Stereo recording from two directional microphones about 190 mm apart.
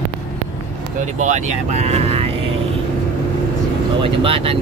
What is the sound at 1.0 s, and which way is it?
Speech, 40° right (ahead or behind).